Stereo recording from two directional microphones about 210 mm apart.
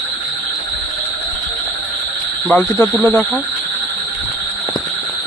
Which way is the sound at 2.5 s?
5° left (ahead or behind).